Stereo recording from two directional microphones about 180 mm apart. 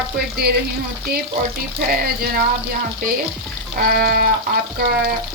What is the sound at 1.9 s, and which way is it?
Speech, 55° right (ahead or behind).